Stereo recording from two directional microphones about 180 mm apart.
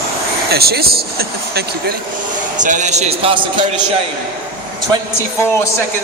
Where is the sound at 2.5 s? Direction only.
45° right (ahead or behind).